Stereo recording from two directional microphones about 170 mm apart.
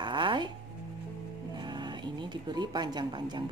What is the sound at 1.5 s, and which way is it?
Speech, 25° right (ahead or behind).